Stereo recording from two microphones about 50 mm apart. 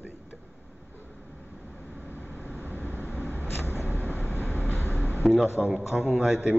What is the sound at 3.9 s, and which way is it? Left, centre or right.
Vehicle, left.